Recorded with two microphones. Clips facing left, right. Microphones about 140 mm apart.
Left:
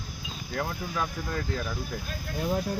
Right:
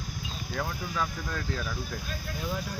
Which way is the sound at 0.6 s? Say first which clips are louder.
Left 1 dB; 5° left (ahead or behind).